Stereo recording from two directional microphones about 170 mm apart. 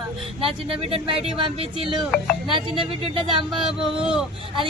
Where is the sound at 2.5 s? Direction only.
30° right (ahead or behind).